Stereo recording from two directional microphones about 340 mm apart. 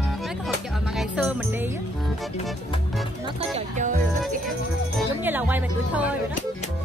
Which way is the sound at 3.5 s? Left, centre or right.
Right.